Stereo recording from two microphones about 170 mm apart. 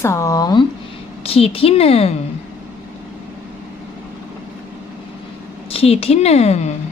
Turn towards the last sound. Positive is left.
turn(degrees=40)  # may be behind; listen again after turning